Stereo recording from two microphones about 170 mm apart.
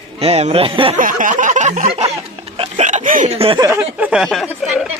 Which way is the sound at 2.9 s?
50° right (ahead or behind).